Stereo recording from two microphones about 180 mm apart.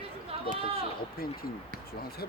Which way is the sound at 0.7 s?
55° left (ahead or behind).